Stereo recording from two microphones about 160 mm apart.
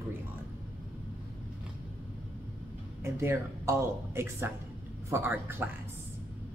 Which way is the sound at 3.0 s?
15° right (ahead or behind).